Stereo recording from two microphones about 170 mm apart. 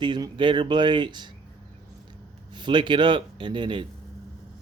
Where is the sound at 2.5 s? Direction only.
25° right (ahead or behind).